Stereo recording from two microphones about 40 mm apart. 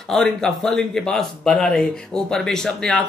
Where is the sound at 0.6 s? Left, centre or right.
Centre.